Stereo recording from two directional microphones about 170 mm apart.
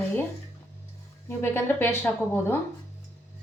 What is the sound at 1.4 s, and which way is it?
Speech, 15° left (ahead or behind).